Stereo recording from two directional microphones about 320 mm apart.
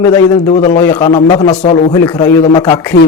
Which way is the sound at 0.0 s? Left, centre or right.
Centre.